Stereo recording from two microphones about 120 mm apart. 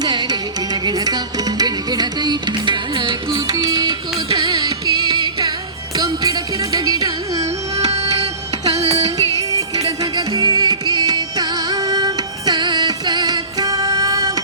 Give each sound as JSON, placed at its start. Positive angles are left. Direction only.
{"t": 0.0, "sound": "music", "side_deg": -35}
{"t": 8.8, "sound": "music", "side_deg": -60}
{"t": 9.0, "sound": "music", "side_deg": -30}